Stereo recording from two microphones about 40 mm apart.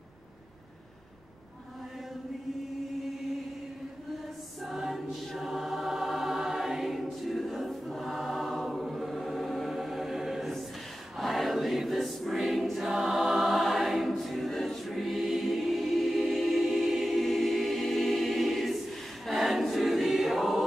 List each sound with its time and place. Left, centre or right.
4.6 s choir: centre